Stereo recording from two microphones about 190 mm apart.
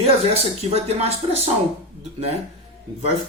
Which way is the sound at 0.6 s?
35° right (ahead or behind).